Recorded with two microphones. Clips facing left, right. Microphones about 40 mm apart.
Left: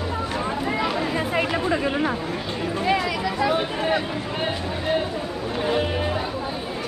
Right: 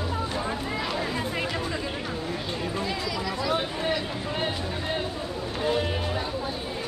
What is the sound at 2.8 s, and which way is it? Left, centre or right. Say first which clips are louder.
Speech: left 7 dB; left.